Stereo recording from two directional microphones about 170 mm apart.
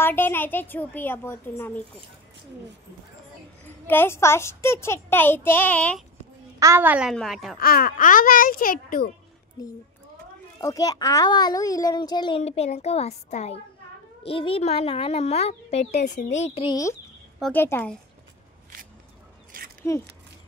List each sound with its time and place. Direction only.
0.0 s a child's voice: 15° left (ahead or behind)
3.6 s a child's voice: 10° left (ahead or behind)
6.6 s a woman's voice: 15° right (ahead or behind)
7.1 s a woman's voice: centre (ahead or behind)
7.5 s a child's voice: 60° left (ahead or behind)
10.6 s a child's voice: 20° left (ahead or behind); by 16.7 s 35° left (ahead or behind)
17.4 s a child's voice: 10° left (ahead or behind)
19.8 s a child's voice: 15° left (ahead or behind)